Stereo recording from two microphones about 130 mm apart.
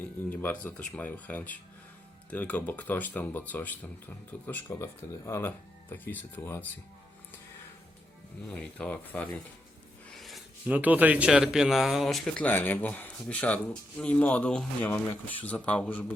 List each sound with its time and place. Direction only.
0.3 s speech: 10° left (ahead or behind)
8.4 s speech: 5° left (ahead or behind)
10.1 s a sound: centre (ahead or behind)
10.7 s speech: 15° right (ahead or behind); by 16.1 s 10° left (ahead or behind)